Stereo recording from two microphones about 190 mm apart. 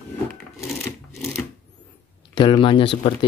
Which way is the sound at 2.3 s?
25° left (ahead or behind).